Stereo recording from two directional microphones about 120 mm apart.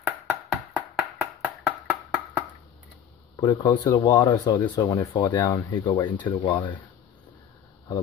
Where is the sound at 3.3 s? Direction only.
35° left (ahead or behind).